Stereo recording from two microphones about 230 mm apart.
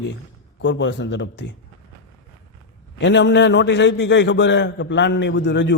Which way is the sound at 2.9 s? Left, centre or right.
Left.